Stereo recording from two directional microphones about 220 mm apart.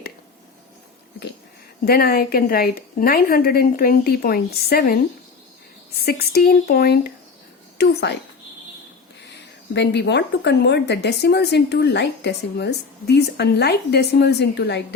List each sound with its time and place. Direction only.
1.8 s speech: 45° left (ahead or behind)
9.7 s speech: 50° left (ahead or behind)